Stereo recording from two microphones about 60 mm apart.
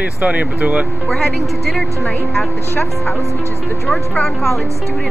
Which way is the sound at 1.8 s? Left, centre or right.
Left.